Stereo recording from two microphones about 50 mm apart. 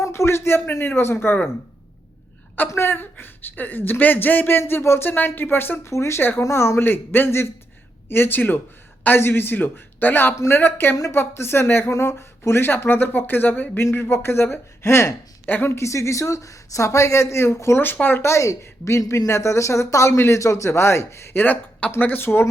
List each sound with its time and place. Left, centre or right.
0.0 s a man's voice: left
2.8 s speech: left
5.8 s speech: left
6.8 s speech: left
17.9 s speech: left
18.2 s speech: left
21.3 s speech: left